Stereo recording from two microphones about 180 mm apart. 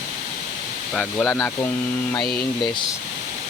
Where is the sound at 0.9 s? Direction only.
5° left (ahead or behind).